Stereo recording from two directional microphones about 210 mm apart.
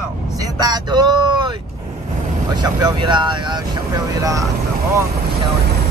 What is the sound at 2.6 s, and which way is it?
Speech, 20° right (ahead or behind).